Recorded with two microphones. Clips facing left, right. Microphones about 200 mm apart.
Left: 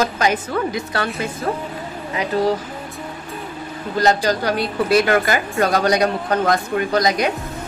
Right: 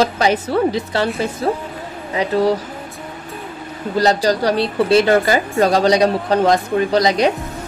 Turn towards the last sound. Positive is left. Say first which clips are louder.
# right 3 dB
turn(degrees=-30)  # may be behind; listen again after turning